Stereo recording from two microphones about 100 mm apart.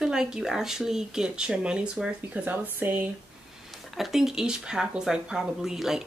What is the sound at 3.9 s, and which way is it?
Speech, 5° right (ahead or behind).